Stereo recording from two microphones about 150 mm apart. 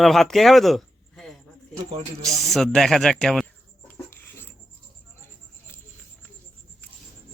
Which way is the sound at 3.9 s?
15° left (ahead or behind).